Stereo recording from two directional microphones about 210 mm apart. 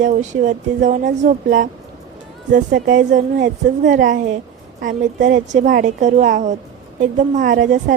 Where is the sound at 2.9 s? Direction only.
40° right (ahead or behind).